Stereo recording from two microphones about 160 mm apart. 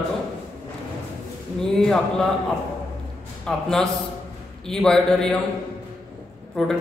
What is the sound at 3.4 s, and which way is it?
A man's voice, 5° left (ahead or behind).